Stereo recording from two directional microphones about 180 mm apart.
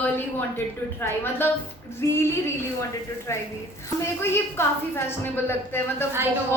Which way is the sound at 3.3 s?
15° left (ahead or behind).